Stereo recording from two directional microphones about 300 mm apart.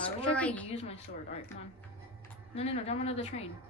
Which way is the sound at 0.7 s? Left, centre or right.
Centre.